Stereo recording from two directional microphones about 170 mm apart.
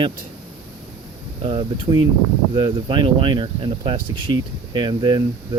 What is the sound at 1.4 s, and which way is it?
Speech, 30° right (ahead or behind).